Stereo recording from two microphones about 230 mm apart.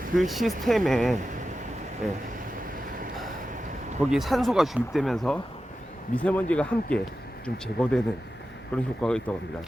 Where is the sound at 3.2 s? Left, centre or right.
Right.